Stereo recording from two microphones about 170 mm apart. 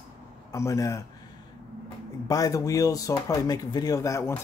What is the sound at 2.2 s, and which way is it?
Speech, 20° left (ahead or behind).